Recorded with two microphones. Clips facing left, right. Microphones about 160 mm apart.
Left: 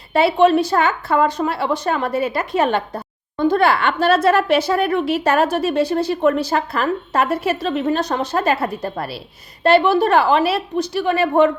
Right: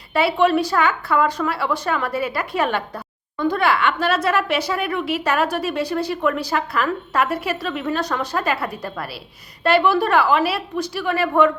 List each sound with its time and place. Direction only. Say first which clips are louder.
0.1 s a woman's voice: left 4 dB; 25° left (ahead or behind)